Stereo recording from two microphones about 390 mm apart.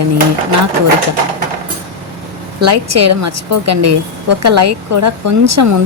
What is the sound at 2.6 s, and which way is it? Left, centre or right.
Speech, right.